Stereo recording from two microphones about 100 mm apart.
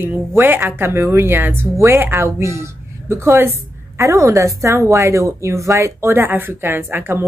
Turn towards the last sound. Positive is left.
turn(degrees=-20)  # may be behind; listen again after turning